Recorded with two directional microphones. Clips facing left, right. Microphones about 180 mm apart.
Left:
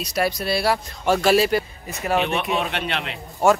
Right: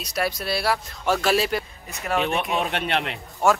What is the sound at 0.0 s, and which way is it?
Speech, centre (ahead or behind).